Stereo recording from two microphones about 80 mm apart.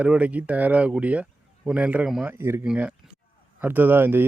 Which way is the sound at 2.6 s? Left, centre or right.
Centre.